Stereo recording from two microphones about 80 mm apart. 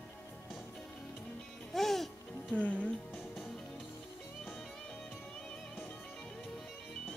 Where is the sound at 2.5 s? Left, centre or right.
Centre.